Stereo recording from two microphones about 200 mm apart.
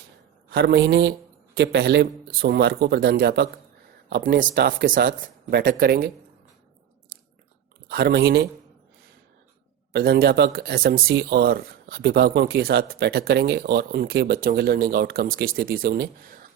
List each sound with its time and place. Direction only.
0.5 s speech: 55° right (ahead or behind)
7.9 s speech: 50° right (ahead or behind)
9.9 s speech: 50° right (ahead or behind)